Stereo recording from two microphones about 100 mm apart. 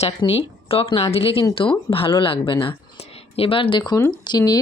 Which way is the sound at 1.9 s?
65° left (ahead or behind).